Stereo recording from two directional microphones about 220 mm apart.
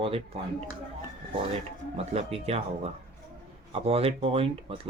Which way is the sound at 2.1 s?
30° right (ahead or behind).